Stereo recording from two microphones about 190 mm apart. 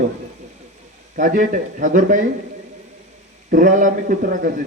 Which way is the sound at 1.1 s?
45° right (ahead or behind).